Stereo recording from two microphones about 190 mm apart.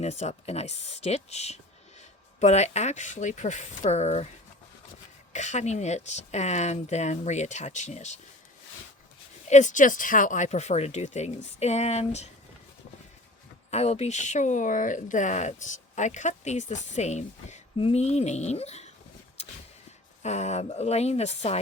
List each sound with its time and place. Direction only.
0.0 s speech: 35° left (ahead or behind)
5.3 s speech: 40° left (ahead or behind)
9.5 s speech: 40° left (ahead or behind)
13.7 s speech: 35° left (ahead or behind)
20.2 s speech: 35° left (ahead or behind)